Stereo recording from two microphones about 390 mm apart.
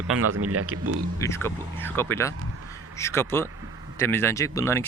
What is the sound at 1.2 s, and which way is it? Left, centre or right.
Speech, centre.